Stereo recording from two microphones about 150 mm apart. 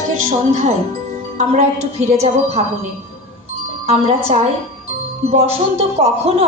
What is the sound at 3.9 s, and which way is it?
A woman's voice, 40° right (ahead or behind).